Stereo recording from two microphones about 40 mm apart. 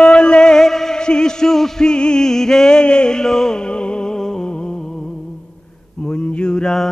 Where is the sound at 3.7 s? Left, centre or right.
Left.